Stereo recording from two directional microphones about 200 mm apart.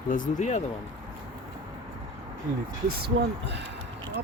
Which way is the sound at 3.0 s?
55° right (ahead or behind).